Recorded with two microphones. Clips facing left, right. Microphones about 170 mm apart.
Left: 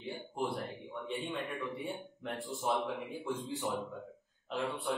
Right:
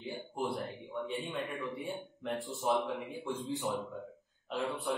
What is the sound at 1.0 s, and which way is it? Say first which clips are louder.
A man's voice: left 1 dB; centre (ahead or behind).